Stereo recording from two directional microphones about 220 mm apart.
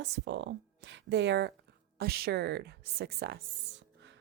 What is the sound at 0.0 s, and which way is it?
Speech, 55° right (ahead or behind).